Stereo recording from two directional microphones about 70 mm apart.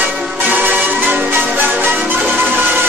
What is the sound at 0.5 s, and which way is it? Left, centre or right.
Music, right.